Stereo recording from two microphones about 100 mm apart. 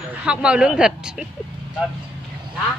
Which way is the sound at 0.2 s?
10° right (ahead or behind).